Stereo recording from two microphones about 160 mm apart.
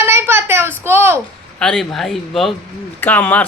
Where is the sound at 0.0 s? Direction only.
15° right (ahead or behind).